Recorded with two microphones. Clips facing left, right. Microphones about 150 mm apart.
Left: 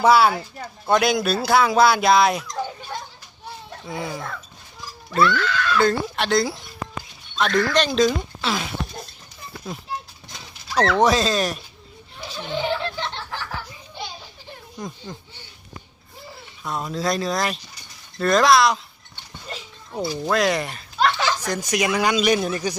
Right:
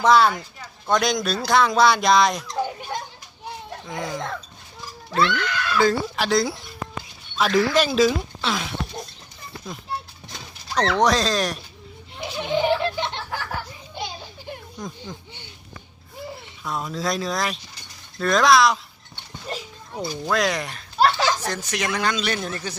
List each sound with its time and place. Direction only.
0.0 s speech: 5° left (ahead or behind)
2.6 s children playing: 10° right (ahead or behind)
3.8 s speech: 5° left (ahead or behind)
5.2 s speech: 20° right (ahead or behind)
5.8 s speech: centre (ahead or behind)
10.9 s speech: centre (ahead or behind)
12.1 s a sound: 15° right (ahead or behind)
14.8 s speech: 10° left (ahead or behind)
16.6 s speech: centre (ahead or behind)
20.3 s speech: centre (ahead or behind)
21.0 s speech: 35° right (ahead or behind)
21.4 s speech: 10° left (ahead or behind)